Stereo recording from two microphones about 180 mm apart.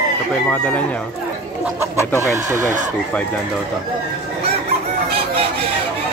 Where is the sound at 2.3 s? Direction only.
15° right (ahead or behind).